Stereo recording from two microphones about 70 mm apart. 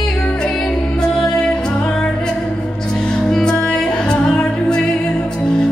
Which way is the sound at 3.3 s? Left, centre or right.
Centre.